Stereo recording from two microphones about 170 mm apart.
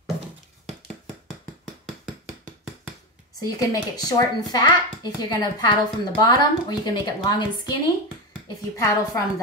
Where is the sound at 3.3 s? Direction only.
20° left (ahead or behind).